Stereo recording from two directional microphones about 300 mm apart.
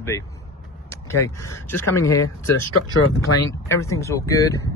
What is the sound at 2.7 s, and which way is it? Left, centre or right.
Speech, left.